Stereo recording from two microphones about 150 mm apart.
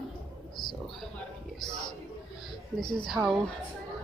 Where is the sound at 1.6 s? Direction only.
30° left (ahead or behind).